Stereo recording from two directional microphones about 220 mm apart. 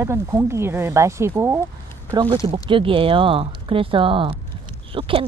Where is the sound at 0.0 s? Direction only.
10° right (ahead or behind).